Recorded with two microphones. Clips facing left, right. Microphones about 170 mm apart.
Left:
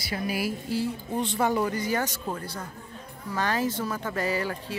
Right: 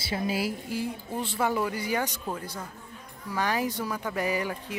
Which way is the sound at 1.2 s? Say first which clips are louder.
Left 2 dB; 5° right (ahead or behind).